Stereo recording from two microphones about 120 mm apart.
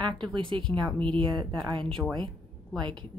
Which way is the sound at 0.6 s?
5° left (ahead or behind).